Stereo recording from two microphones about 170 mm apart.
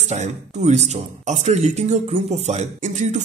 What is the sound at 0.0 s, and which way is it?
Speech, 40° right (ahead or behind).